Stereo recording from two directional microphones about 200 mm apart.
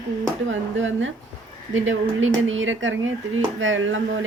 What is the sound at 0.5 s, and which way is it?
Speech, 70° right (ahead or behind).